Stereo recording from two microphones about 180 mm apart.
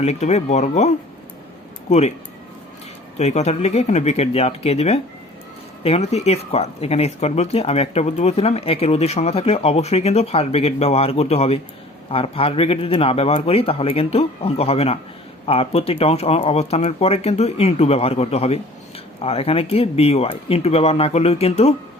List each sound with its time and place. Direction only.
0.0 s speech: 40° left (ahead or behind)
3.2 s speech: 40° left (ahead or behind)